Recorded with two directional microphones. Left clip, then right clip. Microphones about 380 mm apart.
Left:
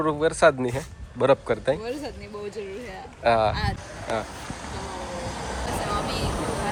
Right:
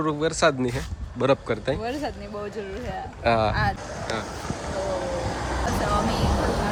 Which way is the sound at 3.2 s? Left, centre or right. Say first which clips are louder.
Left 1 dB; centre.